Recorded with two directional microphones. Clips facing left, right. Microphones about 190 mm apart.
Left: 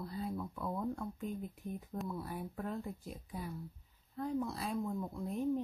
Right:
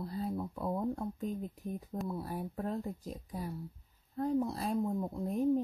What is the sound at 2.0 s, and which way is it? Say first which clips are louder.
Speech: right 3 dB; 35° right (ahead or behind).